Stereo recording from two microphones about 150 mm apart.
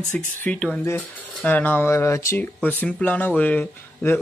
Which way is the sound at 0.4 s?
5° left (ahead or behind).